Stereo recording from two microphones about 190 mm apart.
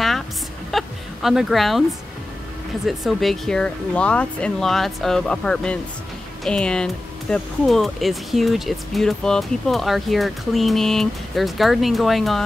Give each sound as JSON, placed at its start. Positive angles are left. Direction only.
{"t": 0.7, "sound": "speech", "side_deg": 0}
{"t": 2.9, "sound": "speech", "side_deg": 0}